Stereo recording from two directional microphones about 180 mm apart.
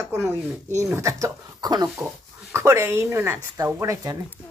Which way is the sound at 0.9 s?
15° right (ahead or behind).